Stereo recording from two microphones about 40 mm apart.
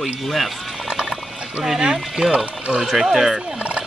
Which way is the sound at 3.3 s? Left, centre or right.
Right.